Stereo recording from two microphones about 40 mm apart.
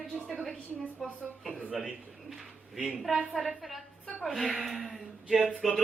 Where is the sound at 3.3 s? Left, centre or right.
Centre.